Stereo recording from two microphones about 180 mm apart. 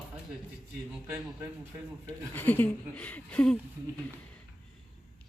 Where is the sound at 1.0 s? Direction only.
10° right (ahead or behind).